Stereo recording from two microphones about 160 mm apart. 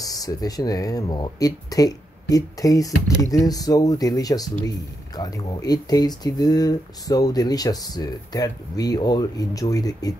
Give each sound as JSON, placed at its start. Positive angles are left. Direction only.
{"t": 0.0, "sound": "speech", "side_deg": 20}